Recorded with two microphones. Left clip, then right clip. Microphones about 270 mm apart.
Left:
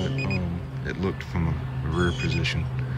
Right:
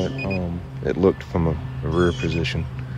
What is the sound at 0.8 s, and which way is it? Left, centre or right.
Speech, centre.